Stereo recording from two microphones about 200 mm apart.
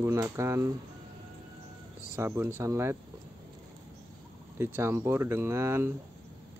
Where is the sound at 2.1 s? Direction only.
10° right (ahead or behind).